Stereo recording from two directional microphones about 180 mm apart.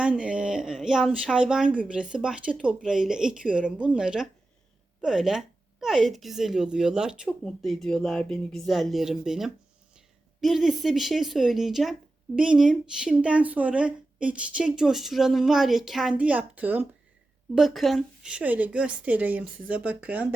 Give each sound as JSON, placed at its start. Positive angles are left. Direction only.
{"t": 0.0, "sound": "a woman's voice", "side_deg": -5}